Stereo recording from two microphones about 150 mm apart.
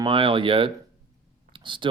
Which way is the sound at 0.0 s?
35° right (ahead or behind).